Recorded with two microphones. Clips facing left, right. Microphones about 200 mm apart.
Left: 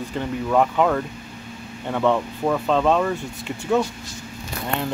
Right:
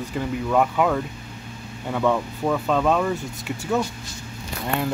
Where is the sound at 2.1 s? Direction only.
5° right (ahead or behind).